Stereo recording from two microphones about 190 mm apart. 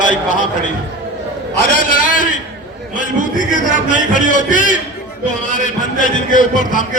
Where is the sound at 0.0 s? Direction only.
40° left (ahead or behind).